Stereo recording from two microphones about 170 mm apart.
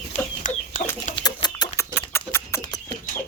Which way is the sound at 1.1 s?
25° left (ahead or behind).